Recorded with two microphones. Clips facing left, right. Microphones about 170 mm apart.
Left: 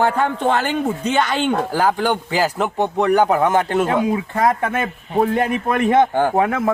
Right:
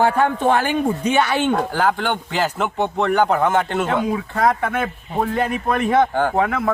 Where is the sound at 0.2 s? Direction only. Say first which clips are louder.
Right 1 dB; 10° right (ahead or behind).